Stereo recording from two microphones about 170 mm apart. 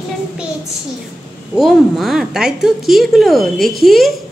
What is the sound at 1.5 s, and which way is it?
A woman's voice, centre (ahead or behind).